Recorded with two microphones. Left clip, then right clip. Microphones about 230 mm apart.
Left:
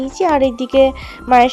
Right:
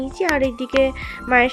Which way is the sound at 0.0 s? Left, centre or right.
Centre.